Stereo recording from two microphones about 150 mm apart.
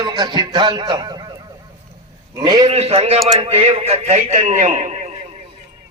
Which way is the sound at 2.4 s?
25° right (ahead or behind).